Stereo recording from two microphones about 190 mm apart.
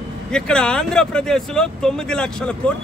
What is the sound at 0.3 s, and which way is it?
Speech, 5° left (ahead or behind).